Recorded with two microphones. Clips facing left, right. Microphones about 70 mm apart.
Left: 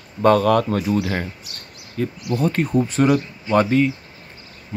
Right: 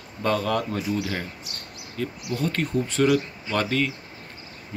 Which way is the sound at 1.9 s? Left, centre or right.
Left.